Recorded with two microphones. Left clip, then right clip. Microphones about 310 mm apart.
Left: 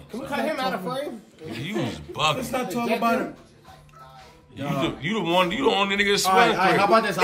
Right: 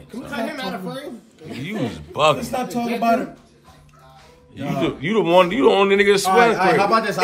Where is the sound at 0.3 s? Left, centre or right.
Centre.